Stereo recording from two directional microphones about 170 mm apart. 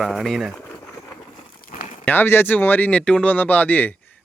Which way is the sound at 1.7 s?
45° left (ahead or behind).